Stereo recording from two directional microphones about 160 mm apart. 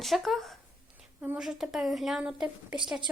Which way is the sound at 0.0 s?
Centre (ahead or behind).